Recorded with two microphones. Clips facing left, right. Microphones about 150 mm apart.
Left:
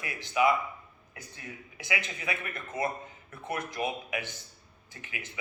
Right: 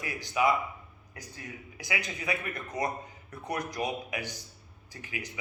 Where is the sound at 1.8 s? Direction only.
40° right (ahead or behind).